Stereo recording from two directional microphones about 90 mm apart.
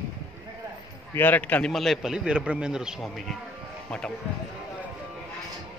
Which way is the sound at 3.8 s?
10° left (ahead or behind).